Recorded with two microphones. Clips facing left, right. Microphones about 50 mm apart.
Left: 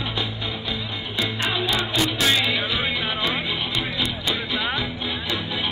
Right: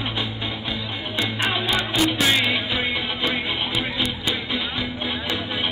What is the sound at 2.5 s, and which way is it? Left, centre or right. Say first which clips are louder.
Music: even; right.